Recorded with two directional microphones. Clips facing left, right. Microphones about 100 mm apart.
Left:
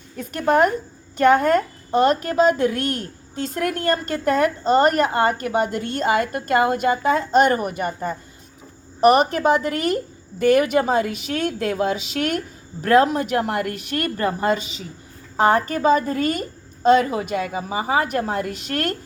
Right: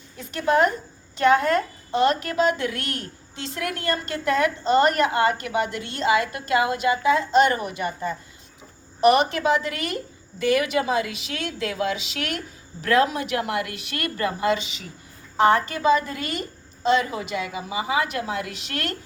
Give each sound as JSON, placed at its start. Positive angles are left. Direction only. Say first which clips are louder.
{"t": 0.2, "sound": "a woman's voice", "louder": "left 3 dB", "side_deg": 45}